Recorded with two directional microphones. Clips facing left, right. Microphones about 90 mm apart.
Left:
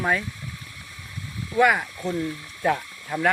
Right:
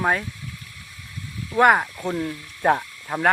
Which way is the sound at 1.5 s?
45° right (ahead or behind).